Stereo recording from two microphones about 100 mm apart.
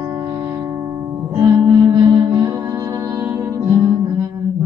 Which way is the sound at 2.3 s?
30° right (ahead or behind).